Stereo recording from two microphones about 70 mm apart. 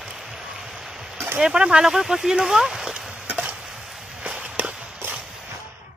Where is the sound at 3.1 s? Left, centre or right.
Centre.